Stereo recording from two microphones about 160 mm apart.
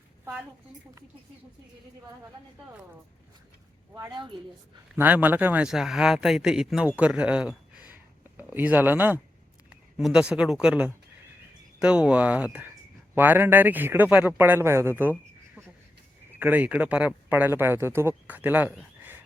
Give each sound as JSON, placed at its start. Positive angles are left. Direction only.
{"t": 3.9, "sound": "a woman's voice", "side_deg": -25}
{"t": 4.9, "sound": "speech", "side_deg": -10}
{"t": 16.3, "sound": "speech", "side_deg": -10}